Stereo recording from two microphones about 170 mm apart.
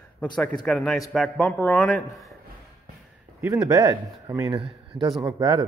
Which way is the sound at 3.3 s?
20° right (ahead or behind).